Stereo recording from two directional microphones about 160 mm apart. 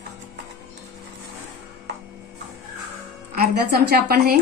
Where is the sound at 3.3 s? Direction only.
75° right (ahead or behind).